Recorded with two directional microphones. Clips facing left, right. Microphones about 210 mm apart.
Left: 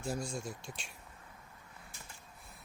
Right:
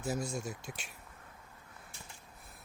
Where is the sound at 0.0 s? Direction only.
5° right (ahead or behind).